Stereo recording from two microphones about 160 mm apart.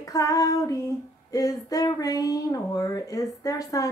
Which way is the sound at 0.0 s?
20° left (ahead or behind).